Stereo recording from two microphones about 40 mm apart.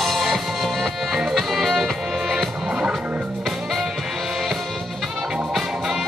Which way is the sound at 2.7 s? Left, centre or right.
Centre.